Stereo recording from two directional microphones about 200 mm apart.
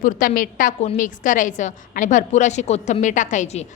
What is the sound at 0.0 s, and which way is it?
A woman's voice, 45° left (ahead or behind).